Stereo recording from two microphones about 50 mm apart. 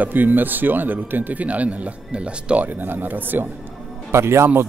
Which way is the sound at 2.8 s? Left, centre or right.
Right.